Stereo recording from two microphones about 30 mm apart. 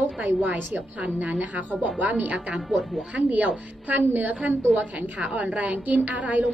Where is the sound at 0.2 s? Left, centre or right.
Right.